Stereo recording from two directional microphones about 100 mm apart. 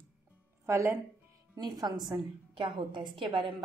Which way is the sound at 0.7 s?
25° right (ahead or behind).